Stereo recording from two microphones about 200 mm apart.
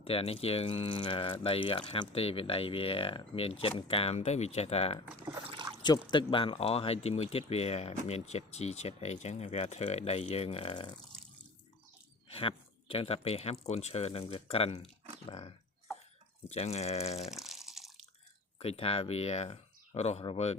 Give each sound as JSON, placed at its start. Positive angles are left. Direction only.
{"t": 0.0, "sound": "speech", "side_deg": 30}
{"t": 5.4, "sound": "a sound", "side_deg": -30}
{"t": 6.1, "sound": "speech", "side_deg": 25}
{"t": 12.3, "sound": "speech", "side_deg": 25}
{"t": 17.2, "sound": "water", "side_deg": 0}
{"t": 18.6, "sound": "speech", "side_deg": 30}